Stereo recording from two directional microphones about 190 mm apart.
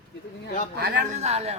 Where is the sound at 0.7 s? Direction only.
55° right (ahead or behind).